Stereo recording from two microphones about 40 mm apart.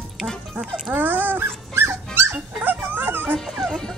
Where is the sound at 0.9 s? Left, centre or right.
Right.